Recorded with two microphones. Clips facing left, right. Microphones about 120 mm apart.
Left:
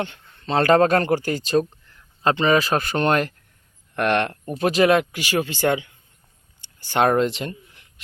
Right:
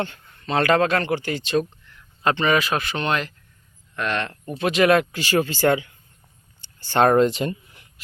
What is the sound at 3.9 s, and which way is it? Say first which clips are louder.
Speech: left 5 dB; 60° left (ahead or behind).